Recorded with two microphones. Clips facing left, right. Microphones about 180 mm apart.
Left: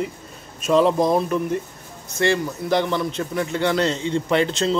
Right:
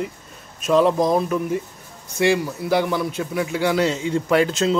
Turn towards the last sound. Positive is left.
turn(degrees=-5)  # may be behind; listen again after turning